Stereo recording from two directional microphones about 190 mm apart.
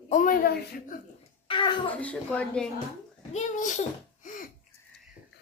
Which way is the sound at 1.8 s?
5° left (ahead or behind).